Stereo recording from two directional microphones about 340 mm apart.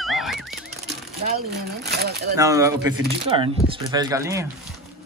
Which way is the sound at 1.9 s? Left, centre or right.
Right.